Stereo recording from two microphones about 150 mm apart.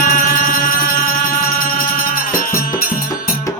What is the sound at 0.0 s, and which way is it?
Music, 70° left (ahead or behind).